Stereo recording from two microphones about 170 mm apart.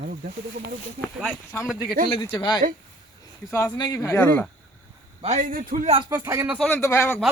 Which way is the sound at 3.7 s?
25° left (ahead or behind).